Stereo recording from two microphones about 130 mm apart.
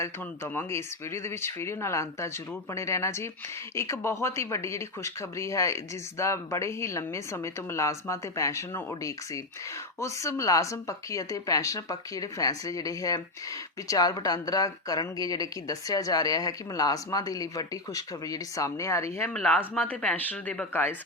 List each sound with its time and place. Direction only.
0.0 s speech: 20° left (ahead or behind)
19.3 s speech: 5° left (ahead or behind)